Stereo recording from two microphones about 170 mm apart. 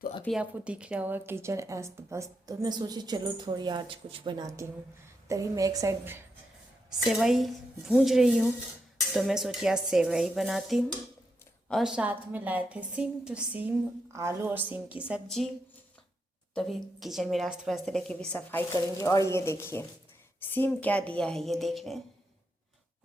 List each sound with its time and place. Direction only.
0.3 s a woman's voice: 5° right (ahead or behind)
7.0 s a woman's voice: 5° right (ahead or behind)
16.6 s a woman's voice: centre (ahead or behind)
18.7 s a woman's voice: 20° left (ahead or behind); by 22.0 s centre (ahead or behind)